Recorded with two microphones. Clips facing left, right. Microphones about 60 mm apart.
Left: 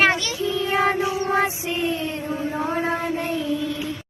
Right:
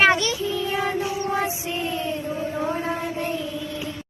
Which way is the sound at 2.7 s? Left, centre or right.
Left.